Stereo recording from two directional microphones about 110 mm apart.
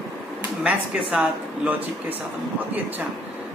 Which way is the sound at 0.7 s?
10° right (ahead or behind).